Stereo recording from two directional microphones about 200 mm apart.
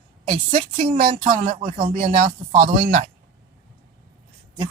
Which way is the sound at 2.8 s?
40° right (ahead or behind).